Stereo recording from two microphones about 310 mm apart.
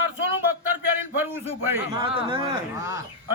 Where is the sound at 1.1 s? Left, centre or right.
Centre.